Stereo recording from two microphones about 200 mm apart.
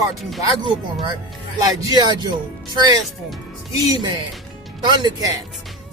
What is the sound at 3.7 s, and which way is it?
Music, 20° right (ahead or behind).